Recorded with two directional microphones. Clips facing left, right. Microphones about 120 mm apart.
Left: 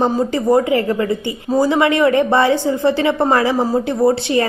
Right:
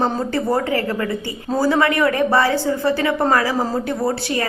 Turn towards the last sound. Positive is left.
turn(degrees=25)  # may be behind; listen again after turning